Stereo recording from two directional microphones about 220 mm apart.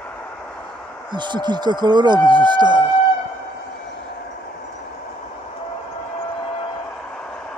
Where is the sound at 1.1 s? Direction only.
20° right (ahead or behind).